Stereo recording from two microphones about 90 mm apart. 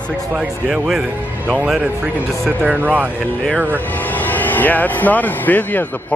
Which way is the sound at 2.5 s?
20° right (ahead or behind).